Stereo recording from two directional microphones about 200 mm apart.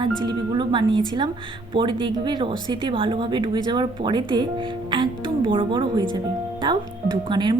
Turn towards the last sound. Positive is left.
turn(degrees=-20)  # may be behind; listen again after turning